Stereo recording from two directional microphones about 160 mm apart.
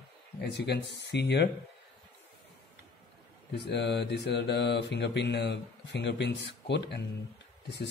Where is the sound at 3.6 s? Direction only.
90° left.